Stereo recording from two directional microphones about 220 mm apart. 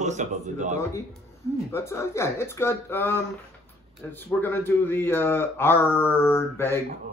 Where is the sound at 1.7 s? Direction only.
10° left (ahead or behind).